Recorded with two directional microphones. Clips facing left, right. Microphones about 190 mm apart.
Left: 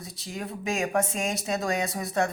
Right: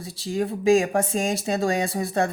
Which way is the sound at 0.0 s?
30° right (ahead or behind).